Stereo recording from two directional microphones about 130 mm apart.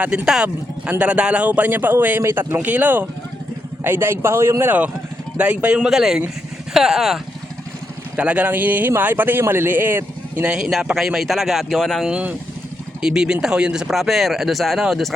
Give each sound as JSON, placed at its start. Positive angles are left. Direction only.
{"t": 0.0, "sound": "a man's voice", "side_deg": -10}
{"t": 10.5, "sound": "speech", "side_deg": -5}